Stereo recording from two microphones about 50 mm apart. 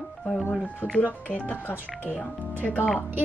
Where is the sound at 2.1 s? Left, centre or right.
Left.